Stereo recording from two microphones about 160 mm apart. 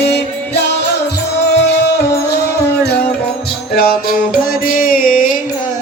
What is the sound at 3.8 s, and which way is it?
Music, 70° left (ahead or behind).